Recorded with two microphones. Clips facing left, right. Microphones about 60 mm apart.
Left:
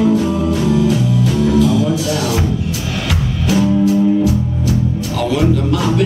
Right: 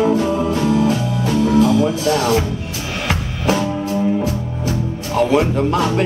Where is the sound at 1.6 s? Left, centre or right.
Right.